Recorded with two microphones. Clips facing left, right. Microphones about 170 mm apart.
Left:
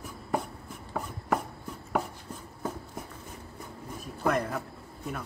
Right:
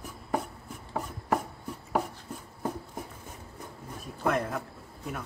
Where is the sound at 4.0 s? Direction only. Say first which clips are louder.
Even; centre (ahead or behind).